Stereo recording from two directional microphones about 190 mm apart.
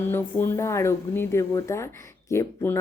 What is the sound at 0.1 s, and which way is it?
A woman's voice, 10° left (ahead or behind).